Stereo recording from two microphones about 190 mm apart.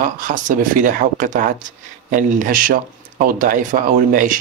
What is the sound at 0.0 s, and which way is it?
Speech, 45° right (ahead or behind).